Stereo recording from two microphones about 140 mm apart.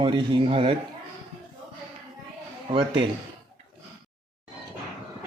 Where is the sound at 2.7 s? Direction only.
40° right (ahead or behind).